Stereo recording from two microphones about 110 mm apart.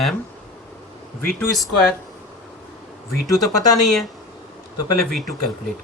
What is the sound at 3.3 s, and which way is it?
Speech, 30° left (ahead or behind).